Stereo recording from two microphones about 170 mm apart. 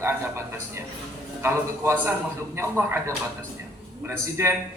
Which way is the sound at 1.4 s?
15° right (ahead or behind).